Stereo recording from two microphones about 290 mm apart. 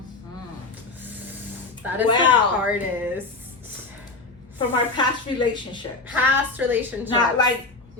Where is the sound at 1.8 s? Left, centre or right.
Centre.